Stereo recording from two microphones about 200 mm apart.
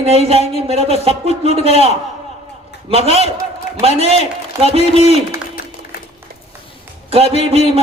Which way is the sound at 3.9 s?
30° right (ahead or behind).